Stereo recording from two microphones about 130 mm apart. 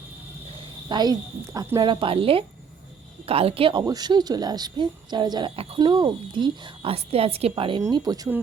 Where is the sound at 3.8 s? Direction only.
30° right (ahead or behind).